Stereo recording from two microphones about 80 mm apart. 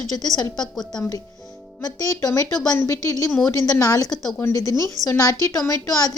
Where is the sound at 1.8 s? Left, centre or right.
Left.